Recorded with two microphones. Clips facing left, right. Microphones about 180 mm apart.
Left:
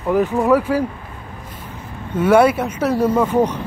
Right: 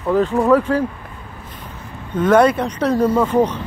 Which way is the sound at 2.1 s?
10° left (ahead or behind).